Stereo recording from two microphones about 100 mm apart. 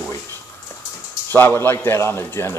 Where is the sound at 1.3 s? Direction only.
20° left (ahead or behind).